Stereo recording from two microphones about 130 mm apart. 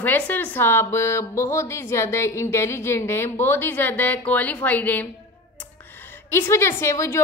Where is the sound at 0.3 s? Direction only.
15° left (ahead or behind).